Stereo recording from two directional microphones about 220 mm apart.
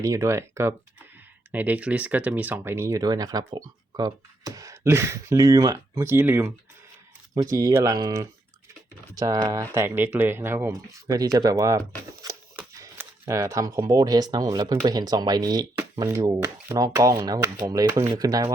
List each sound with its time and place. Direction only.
0.0 s speech: 15° right (ahead or behind)
7.5 s speech: 15° right (ahead or behind)
12.2 s a sound: 15° right (ahead or behind)
14.8 s speech: 20° right (ahead or behind)